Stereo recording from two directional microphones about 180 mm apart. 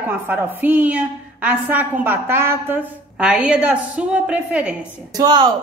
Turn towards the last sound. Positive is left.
turn(degrees=-25)  # may be behind; listen again after turning